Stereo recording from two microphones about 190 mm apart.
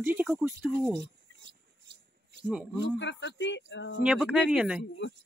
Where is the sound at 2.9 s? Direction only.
70° left (ahead or behind).